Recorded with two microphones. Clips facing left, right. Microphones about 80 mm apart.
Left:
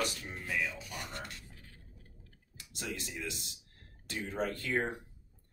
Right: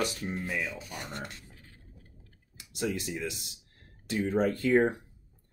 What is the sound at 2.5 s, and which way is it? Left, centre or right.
Speech, centre.